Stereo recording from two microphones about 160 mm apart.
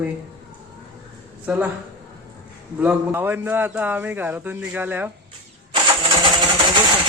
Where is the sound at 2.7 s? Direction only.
10° right (ahead or behind).